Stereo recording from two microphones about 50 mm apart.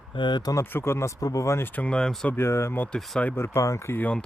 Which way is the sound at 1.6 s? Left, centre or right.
Left.